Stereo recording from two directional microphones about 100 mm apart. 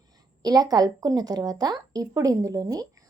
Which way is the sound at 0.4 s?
40° right (ahead or behind).